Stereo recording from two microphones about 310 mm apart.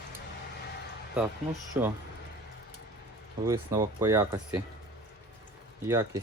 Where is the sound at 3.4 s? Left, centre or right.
Centre.